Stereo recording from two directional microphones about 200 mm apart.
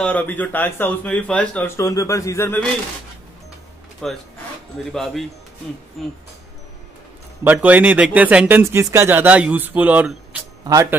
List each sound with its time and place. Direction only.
0.0 s speech: 10° left (ahead or behind)
4.0 s speech: centre (ahead or behind)
7.4 s speech: 5° right (ahead or behind)